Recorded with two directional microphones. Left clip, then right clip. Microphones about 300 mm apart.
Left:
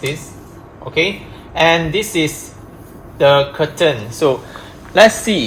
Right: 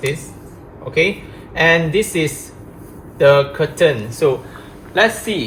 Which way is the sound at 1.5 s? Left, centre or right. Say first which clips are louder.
Left 1 dB; centre.